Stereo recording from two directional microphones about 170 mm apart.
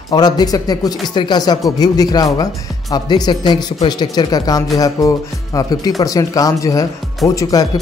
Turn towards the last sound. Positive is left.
turn(degrees=20)  # may be behind; listen again after turning